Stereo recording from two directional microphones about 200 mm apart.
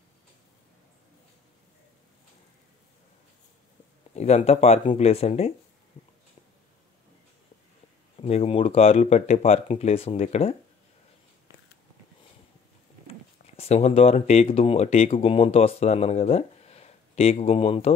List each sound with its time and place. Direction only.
4.1 s speech: 35° left (ahead or behind)
8.2 s speech: 30° left (ahead or behind)
13.6 s speech: 30° left (ahead or behind)